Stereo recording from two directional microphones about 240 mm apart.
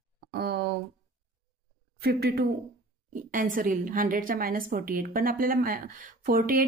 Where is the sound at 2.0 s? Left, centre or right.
Right.